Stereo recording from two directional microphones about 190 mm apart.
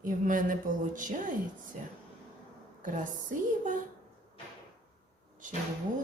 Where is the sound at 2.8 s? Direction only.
45° right (ahead or behind).